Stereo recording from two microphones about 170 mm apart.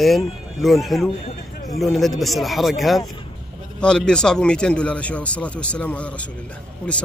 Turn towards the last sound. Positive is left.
turn(degrees=5)  # may be behind; listen again after turning